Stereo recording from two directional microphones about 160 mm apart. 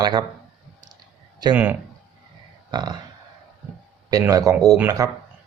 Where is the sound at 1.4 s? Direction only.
25° right (ahead or behind).